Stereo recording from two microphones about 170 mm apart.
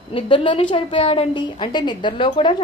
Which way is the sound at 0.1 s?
30° left (ahead or behind).